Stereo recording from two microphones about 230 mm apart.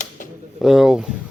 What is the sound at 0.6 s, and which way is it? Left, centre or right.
Speech, centre.